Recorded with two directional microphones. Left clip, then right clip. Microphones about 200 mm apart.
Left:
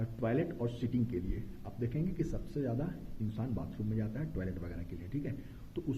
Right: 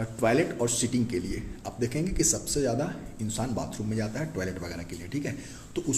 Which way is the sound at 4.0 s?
15° right (ahead or behind).